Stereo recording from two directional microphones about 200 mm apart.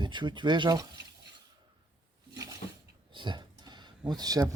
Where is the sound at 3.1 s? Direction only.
25° right (ahead or behind).